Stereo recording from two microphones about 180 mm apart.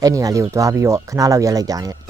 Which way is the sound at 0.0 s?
20° right (ahead or behind).